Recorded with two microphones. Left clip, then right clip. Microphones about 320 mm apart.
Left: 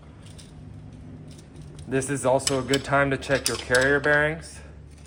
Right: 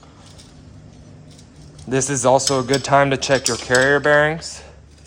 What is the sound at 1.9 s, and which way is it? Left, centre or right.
Speech, right.